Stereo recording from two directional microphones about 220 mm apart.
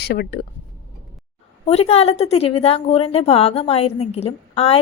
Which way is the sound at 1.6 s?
30° left (ahead or behind).